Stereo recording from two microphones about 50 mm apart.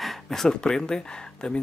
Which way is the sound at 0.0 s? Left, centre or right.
Centre.